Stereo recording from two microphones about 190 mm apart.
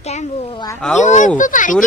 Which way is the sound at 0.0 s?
35° left (ahead or behind).